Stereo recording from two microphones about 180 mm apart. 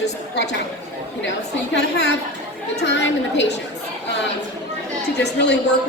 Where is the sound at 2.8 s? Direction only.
80° left.